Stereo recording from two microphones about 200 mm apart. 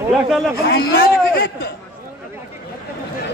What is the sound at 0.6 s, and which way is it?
A man's voice, 50° left (ahead or behind).